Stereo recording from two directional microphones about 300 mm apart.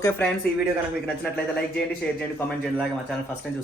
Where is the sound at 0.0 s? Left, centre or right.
Centre.